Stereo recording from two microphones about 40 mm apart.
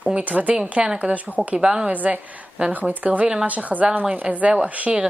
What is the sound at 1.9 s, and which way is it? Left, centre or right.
A woman's voice, right.